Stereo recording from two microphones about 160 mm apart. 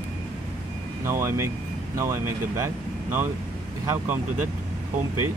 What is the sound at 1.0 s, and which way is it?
Speech, 15° right (ahead or behind).